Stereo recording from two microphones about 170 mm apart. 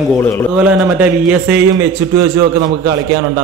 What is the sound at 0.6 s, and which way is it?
A man's voice, 5° right (ahead or behind).